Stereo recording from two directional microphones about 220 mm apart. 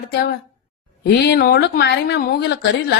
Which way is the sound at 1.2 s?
45° left (ahead or behind).